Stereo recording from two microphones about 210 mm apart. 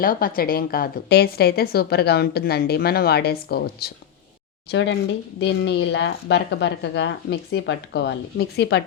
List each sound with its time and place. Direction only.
0.0 s a woman's voice: 45° left (ahead or behind)
4.7 s a woman's voice: 60° left (ahead or behind)